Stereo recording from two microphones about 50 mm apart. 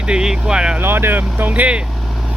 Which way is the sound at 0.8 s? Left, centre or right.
Right.